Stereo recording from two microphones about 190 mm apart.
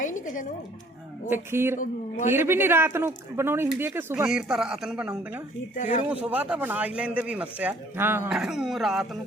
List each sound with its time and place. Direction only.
1.3 s speech: 10° right (ahead or behind)
5.7 s speech: 40° left (ahead or behind)
6.2 s speech: 5° right (ahead or behind)